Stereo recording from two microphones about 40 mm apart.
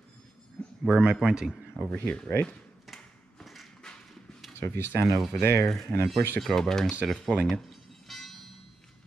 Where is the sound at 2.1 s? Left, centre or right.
Left.